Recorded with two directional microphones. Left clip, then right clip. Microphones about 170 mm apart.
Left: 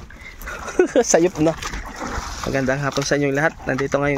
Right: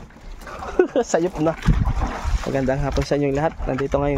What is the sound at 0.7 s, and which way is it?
Speech, 20° left (ahead or behind).